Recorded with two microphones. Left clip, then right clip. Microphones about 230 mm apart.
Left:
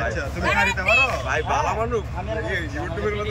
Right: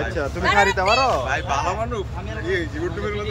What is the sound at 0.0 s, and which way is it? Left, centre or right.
Speech, centre.